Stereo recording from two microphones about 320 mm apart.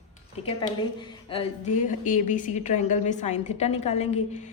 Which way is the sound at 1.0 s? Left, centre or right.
Centre.